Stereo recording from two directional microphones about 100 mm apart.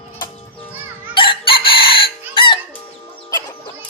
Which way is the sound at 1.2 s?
60° left (ahead or behind).